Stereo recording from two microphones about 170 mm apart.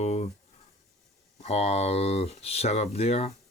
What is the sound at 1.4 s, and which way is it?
Speech, 40° left (ahead or behind).